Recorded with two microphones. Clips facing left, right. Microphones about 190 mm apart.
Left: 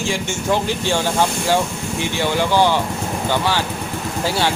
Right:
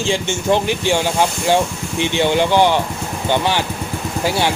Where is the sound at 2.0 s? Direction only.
20° right (ahead or behind).